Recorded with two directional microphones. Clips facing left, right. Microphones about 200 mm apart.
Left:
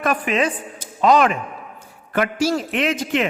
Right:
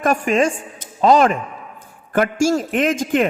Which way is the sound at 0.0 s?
45° right (ahead or behind).